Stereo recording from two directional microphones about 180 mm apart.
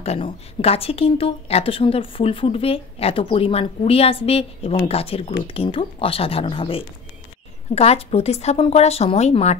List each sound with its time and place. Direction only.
0.0 s speech: 35° left (ahead or behind)